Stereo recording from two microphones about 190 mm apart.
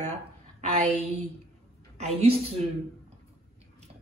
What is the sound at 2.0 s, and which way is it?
Speech, 30° right (ahead or behind).